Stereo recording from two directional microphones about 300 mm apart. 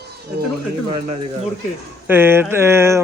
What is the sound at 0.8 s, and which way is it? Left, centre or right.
Speech, centre.